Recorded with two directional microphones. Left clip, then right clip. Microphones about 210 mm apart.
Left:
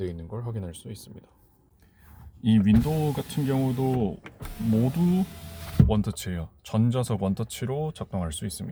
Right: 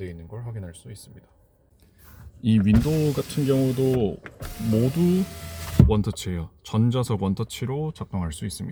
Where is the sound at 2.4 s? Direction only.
5° right (ahead or behind).